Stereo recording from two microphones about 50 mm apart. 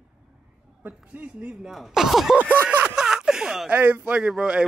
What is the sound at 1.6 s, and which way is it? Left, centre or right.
Speech, centre.